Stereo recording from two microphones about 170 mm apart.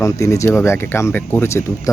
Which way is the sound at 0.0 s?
20° left (ahead or behind).